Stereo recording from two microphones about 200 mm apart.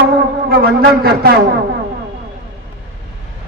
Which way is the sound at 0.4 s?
50° right (ahead or behind).